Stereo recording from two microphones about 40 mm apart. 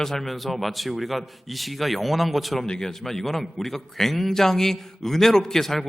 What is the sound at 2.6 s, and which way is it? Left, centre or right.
A man's voice, centre.